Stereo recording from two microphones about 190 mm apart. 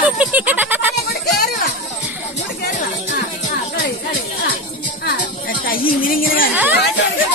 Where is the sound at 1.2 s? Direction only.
55° left (ahead or behind).